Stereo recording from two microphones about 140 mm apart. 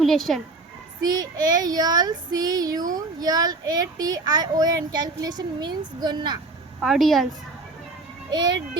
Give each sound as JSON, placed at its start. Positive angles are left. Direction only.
{"t": 0.0, "sound": "a woman's voice", "side_deg": 0}
{"t": 1.0, "sound": "child singing", "side_deg": -30}
{"t": 6.8, "sound": "a woman's voice", "side_deg": 0}
{"t": 8.3, "sound": "a child's voice", "side_deg": -30}